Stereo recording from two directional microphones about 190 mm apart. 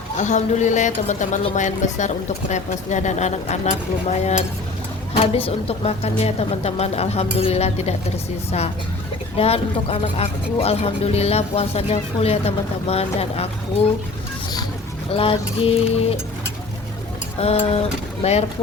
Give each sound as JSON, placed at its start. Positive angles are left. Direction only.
{"t": 0.2, "sound": "speech", "side_deg": 40}
{"t": 5.1, "sound": "speech", "side_deg": 30}
{"t": 9.4, "sound": "speech", "side_deg": 30}
{"t": 15.1, "sound": "mantra", "side_deg": 30}
{"t": 17.4, "sound": "speech", "side_deg": 30}